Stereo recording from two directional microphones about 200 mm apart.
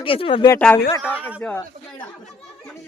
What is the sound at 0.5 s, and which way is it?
Speech, 10° left (ahead or behind).